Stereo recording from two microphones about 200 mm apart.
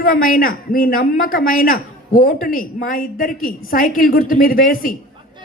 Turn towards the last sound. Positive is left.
turn(degrees=45)  # may be behind; listen again after turning